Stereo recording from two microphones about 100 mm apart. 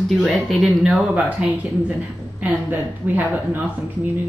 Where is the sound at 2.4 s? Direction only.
15° right (ahead or behind).